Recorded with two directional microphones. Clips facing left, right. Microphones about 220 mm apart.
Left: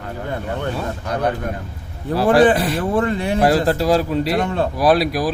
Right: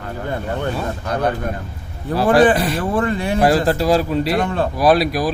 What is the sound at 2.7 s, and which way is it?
Speech, 25° left (ahead or behind).